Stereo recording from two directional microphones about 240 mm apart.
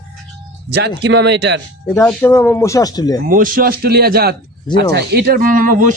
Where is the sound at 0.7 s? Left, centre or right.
Right.